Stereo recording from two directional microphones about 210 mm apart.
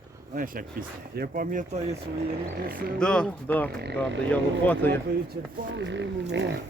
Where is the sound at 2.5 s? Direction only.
45° right (ahead or behind).